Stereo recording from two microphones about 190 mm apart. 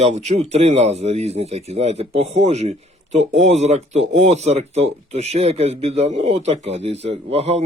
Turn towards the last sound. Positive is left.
turn(degrees=-35)  # may be behind; listen again after turning